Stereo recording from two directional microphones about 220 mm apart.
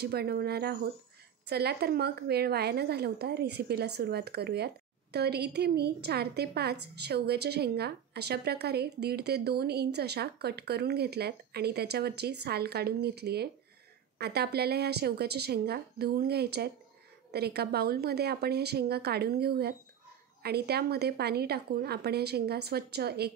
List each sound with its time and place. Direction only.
0.0 s a woman's voice: 45° right (ahead or behind)